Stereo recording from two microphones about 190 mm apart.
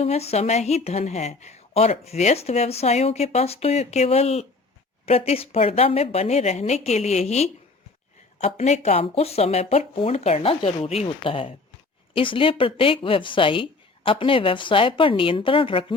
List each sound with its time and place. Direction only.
0.0 s speech: 35° left (ahead or behind)